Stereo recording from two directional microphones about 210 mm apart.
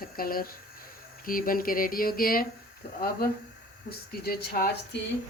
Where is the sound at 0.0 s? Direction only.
45° left (ahead or behind).